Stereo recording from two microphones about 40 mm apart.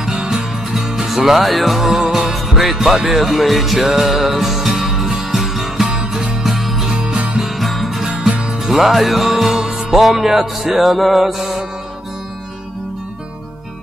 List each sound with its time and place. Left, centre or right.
0.2 s music: right
0.7 s music: centre
2.3 s music: centre
5.9 s music: right
6.4 s music: centre
6.9 s music: right
7.4 s music: centre
8.2 s music: right
8.6 s music: centre
10.8 s mantra: centre